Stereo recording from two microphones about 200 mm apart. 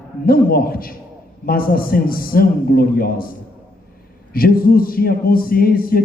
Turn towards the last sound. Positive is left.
turn(degrees=45)  # may be behind; listen again after turning